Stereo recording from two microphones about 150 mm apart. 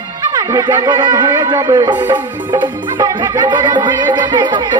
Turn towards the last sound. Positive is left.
turn(degrees=-30)  # may be behind; listen again after turning